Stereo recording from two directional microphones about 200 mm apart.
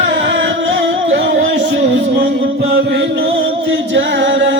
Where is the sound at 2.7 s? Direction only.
60° right (ahead or behind).